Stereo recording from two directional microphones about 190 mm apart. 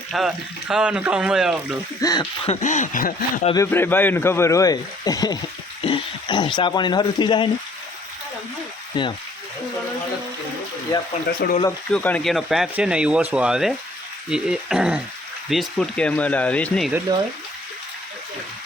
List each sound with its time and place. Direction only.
0.1 s speech: centre (ahead or behind)
2.0 s speech: 20° left (ahead or behind)
2.5 s speech: 40° left (ahead or behind)
3.5 s speech: 15° left (ahead or behind)
8.9 s speech: 25° left (ahead or behind)
11.4 s speech: 60° left (ahead or behind)
11.9 s speech: 5° left (ahead or behind)